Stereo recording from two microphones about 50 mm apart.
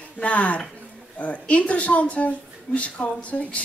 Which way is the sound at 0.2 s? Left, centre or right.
Left.